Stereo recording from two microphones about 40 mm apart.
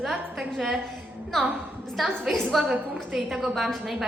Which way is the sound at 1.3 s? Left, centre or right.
Centre.